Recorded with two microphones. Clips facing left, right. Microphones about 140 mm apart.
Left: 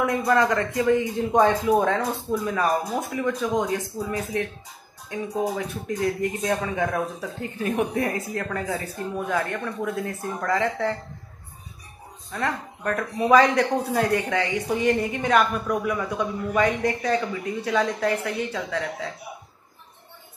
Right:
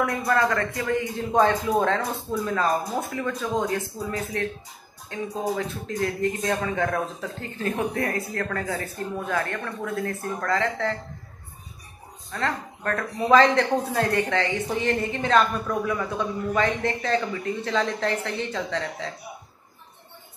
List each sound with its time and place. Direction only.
0.0 s speech: 15° left (ahead or behind)
12.3 s speech: 10° left (ahead or behind)